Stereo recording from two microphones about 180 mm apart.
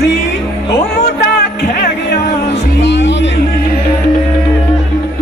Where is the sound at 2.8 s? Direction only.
85° left.